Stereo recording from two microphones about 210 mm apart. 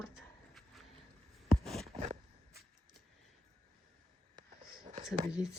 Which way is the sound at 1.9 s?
30° right (ahead or behind).